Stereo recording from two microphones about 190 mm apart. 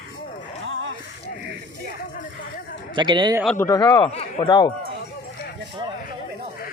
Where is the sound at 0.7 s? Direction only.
90° right.